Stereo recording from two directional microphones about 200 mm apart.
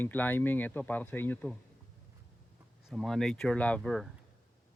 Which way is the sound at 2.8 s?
Centre (ahead or behind).